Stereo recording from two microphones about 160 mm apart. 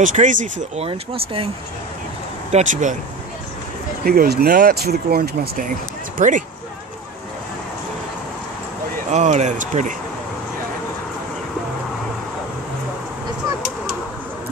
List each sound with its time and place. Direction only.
0.0 s speech: 50° right (ahead or behind)
0.8 s speech: 35° right (ahead or behind)
2.5 s speech: 50° right (ahead or behind)
4.0 s speech: 70° right (ahead or behind); by 6.4 s 55° right (ahead or behind)
9.1 s speech: 45° right (ahead or behind)